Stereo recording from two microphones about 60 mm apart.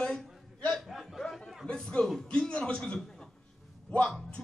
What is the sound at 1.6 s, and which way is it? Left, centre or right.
A man's voice, centre.